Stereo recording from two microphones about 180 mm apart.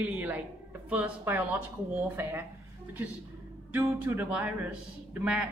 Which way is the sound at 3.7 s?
10° right (ahead or behind).